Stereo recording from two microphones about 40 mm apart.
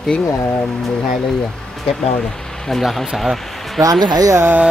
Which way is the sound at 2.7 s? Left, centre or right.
Centre.